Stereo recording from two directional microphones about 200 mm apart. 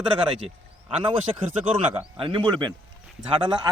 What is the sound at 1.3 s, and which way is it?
Speech, 25° right (ahead or behind).